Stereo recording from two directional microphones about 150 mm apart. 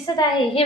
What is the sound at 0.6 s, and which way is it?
Speech, 40° left (ahead or behind).